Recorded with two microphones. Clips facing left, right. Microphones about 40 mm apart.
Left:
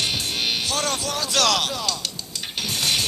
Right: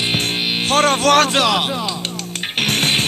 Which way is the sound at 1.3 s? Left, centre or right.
Right.